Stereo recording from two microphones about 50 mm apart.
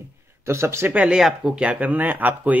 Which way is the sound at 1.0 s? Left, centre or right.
Centre.